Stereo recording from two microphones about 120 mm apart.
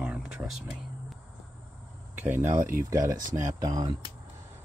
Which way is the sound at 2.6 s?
25° right (ahead or behind).